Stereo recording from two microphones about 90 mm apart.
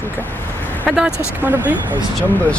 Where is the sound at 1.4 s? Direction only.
20° right (ahead or behind).